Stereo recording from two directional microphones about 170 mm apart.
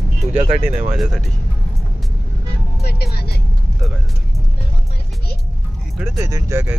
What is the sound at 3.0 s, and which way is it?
Vehicle, 70° left (ahead or behind).